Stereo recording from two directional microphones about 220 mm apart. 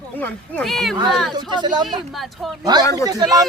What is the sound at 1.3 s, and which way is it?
Speech, 20° right (ahead or behind).